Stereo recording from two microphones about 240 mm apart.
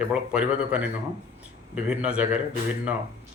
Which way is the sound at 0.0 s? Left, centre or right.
Centre.